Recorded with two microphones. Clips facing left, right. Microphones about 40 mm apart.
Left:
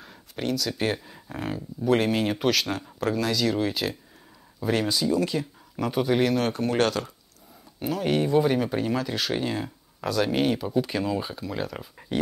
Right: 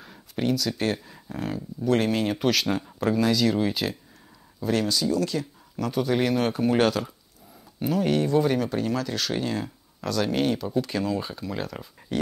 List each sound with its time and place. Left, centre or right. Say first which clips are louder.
0.0 s speech: right 3 dB; centre
4.6 s speech: even; centre
6.1 s speech: right 1 dB; centre
8.1 s speech: left 2 dB; centre